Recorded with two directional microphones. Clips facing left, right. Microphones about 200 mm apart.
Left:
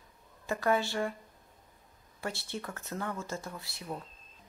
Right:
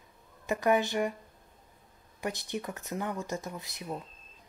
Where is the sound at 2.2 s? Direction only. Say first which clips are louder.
Right 3 dB; 15° right (ahead or behind).